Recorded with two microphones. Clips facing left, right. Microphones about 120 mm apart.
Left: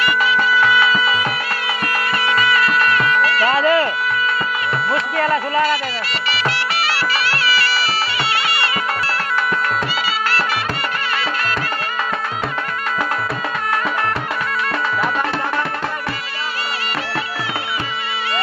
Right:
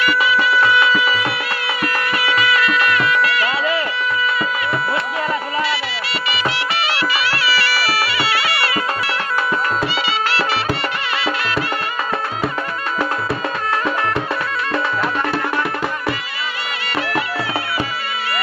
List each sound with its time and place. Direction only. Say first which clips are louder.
3.3 s music: left 4 dB; 40° left (ahead or behind)
4.9 s music: left 3 dB; 5° right (ahead or behind)
8.0 s music: right 1 dB; 25° left (ahead or behind)
10.2 s music: even; 45° left (ahead or behind)